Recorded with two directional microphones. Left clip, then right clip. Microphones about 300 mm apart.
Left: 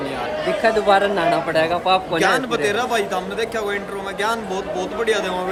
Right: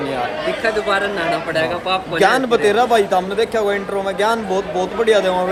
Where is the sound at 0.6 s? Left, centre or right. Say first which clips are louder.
Left 3 dB; left.